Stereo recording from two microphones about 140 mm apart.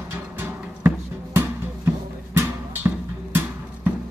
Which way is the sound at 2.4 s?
15° right (ahead or behind).